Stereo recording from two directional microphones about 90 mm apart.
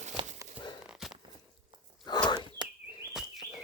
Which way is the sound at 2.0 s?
50° left (ahead or behind).